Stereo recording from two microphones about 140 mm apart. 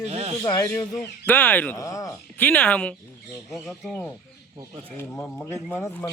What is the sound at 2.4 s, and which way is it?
Speech, 10° left (ahead or behind).